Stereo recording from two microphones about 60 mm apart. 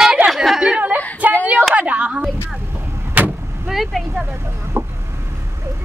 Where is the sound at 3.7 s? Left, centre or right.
Centre.